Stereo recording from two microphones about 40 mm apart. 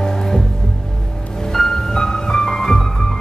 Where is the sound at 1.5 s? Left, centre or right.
Centre.